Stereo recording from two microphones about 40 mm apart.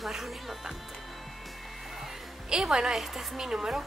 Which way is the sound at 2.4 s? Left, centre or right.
Centre.